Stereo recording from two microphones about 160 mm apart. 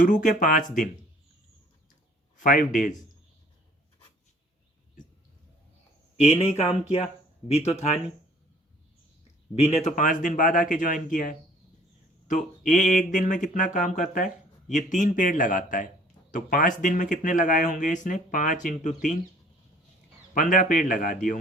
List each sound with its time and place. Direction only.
0.0 s speech: 55° left (ahead or behind)
2.4 s speech: 55° left (ahead or behind)
6.4 s speech: 40° left (ahead or behind)
9.6 s speech: 40° left (ahead or behind)
9.9 s speech: 55° left (ahead or behind)
20.3 s speech: 55° left (ahead or behind)